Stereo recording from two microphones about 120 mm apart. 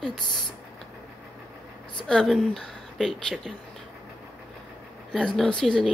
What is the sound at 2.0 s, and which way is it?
Speech, 5° left (ahead or behind).